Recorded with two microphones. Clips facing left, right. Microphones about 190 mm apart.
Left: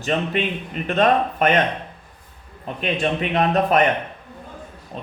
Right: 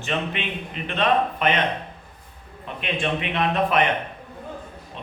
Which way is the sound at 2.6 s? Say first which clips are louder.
Left 4 dB; 40° left (ahead or behind).